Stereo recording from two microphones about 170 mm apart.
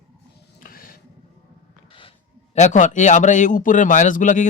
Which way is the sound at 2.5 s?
45° left (ahead or behind).